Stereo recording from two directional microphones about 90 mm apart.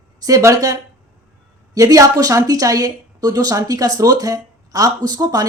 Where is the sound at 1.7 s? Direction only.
40° right (ahead or behind).